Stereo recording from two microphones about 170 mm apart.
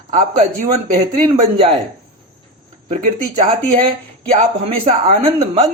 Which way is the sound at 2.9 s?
45° right (ahead or behind).